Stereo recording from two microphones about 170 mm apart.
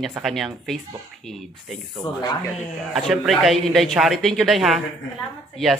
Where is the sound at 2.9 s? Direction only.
Centre (ahead or behind).